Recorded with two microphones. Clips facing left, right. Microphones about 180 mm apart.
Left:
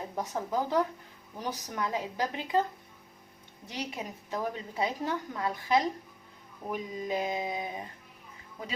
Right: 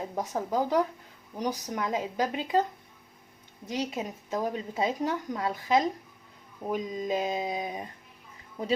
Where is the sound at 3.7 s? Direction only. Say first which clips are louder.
Right 6 dB; 20° right (ahead or behind).